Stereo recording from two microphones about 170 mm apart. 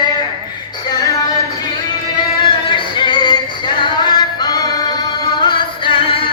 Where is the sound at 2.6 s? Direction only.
30° left (ahead or behind).